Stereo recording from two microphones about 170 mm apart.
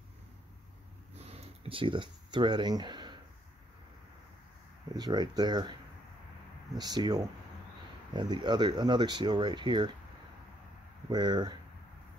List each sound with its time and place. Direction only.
1.1 s a sound: 40° right (ahead or behind)
4.9 s speech: 25° right (ahead or behind)
11.1 s speech: 25° right (ahead or behind)